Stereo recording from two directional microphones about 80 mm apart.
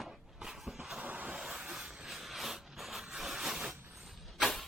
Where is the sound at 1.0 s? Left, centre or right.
Centre.